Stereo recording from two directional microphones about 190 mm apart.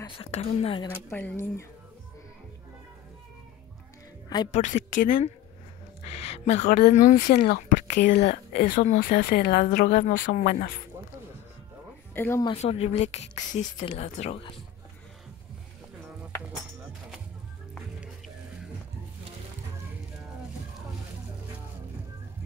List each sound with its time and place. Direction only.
0.0 s speech: 30° left (ahead or behind)
1.1 s speech: 10° left (ahead or behind)
4.5 s speech: 40° left (ahead or behind)
6.1 s speech: 35° left (ahead or behind)
6.7 s speech: 45° left (ahead or behind)
8.0 s speech: 60° left (ahead or behind)
8.5 s speech: 50° left (ahead or behind)
12.1 s speech: 10° left (ahead or behind)
12.4 s speech: 30° left (ahead or behind)